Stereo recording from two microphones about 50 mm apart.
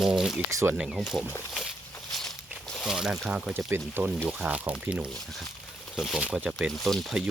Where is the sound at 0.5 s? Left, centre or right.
Right.